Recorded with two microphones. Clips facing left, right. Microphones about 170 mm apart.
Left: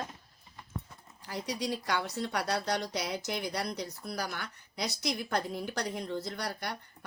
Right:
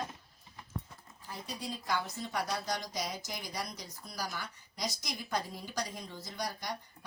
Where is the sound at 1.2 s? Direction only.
75° left (ahead or behind).